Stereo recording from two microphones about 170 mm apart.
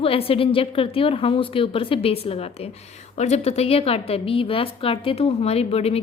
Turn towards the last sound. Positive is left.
turn(degrees=35)  # may be behind; listen again after turning